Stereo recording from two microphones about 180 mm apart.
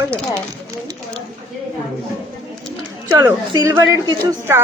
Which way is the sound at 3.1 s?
15° right (ahead or behind).